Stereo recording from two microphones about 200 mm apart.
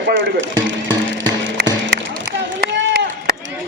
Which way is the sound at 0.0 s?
65° right (ahead or behind).